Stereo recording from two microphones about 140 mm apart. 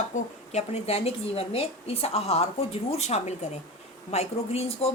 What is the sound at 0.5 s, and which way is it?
A woman's voice, 50° left (ahead or behind).